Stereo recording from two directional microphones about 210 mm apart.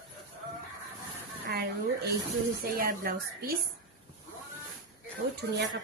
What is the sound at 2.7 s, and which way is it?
Speech, 45° right (ahead or behind).